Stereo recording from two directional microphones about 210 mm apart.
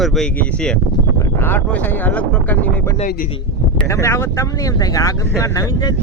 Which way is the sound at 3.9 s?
15° left (ahead or behind).